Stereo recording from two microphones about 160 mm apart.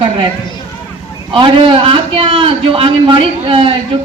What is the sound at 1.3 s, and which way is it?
A man's voice, 35° right (ahead or behind).